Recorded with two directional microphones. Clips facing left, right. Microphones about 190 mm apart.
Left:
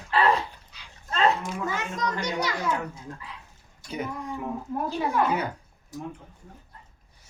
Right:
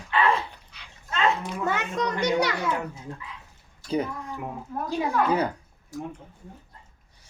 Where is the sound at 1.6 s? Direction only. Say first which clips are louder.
Right 4 dB; 65° right (ahead or behind).